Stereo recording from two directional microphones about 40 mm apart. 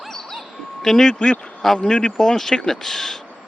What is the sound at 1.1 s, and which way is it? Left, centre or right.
Speech, left.